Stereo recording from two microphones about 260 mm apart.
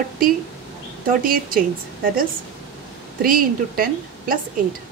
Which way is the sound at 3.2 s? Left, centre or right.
Right.